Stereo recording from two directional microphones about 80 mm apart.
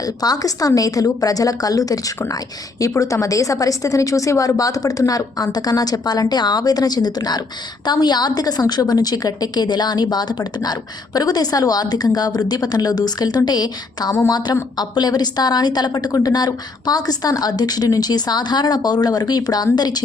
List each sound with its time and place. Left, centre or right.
0.0 s a woman's voice: left